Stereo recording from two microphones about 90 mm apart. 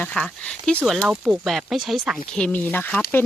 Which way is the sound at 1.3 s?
Centre (ahead or behind).